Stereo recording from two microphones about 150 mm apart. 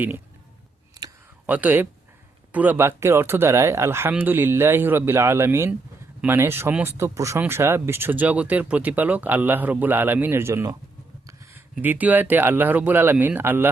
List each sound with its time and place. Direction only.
1.5 s speech: 10° right (ahead or behind)
11.8 s speech: 10° right (ahead or behind)